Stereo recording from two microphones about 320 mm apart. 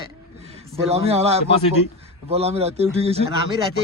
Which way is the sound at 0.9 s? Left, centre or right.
Centre.